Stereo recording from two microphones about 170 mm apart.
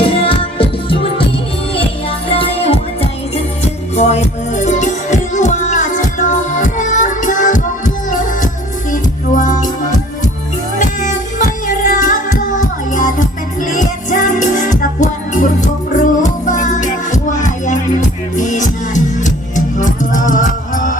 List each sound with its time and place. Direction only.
0.0 s music: 30° left (ahead or behind)
2.3 s music: 35° left (ahead or behind)